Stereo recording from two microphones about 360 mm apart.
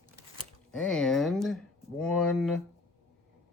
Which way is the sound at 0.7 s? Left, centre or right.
Centre.